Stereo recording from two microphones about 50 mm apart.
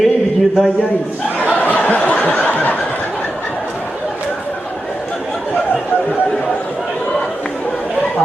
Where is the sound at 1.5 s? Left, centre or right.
Left.